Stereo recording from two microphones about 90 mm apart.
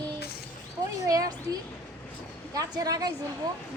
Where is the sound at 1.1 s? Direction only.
45° right (ahead or behind).